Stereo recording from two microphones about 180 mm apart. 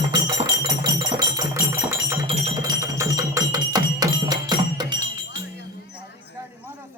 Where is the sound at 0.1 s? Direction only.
20° right (ahead or behind).